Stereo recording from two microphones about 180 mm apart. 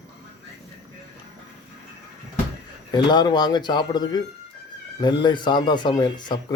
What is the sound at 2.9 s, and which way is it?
Speech, 25° left (ahead or behind).